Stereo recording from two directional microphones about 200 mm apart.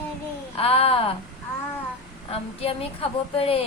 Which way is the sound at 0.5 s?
30° left (ahead or behind).